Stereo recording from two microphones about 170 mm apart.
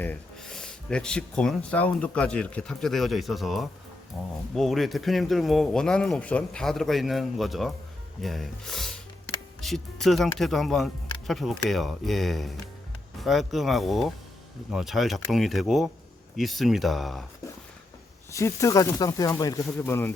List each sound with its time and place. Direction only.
0.0 s speech: 5° left (ahead or behind)
18.3 s speech: 20° left (ahead or behind)